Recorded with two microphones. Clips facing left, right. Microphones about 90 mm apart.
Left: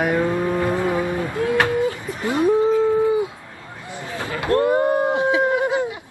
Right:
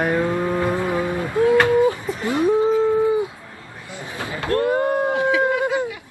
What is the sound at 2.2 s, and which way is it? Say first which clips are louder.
Speech: left 1 dB; 20° left (ahead or behind).